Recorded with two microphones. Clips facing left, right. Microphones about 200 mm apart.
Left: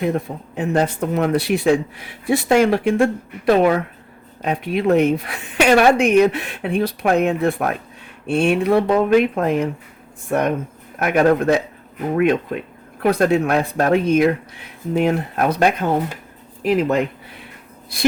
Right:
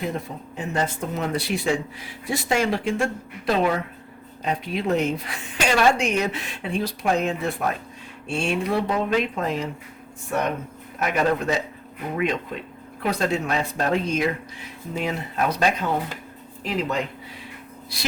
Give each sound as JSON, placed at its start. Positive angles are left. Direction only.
{"t": 0.0, "sound": "speech", "side_deg": 60}
{"t": 11.0, "sound": "speech", "side_deg": 55}